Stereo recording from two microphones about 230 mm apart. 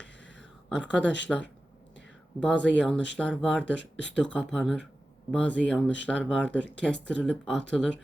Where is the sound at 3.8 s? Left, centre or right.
Left.